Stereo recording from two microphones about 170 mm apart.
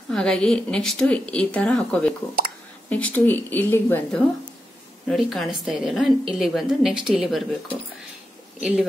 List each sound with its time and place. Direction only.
0.1 s speech: 5° left (ahead or behind)
2.4 s a sound: 55° right (ahead or behind)
2.9 s speech: 10° left (ahead or behind)
5.0 s speech: centre (ahead or behind)
8.5 s speech: 5° right (ahead or behind)